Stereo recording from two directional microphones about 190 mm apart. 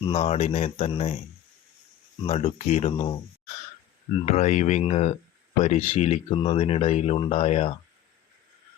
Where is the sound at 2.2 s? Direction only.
35° left (ahead or behind).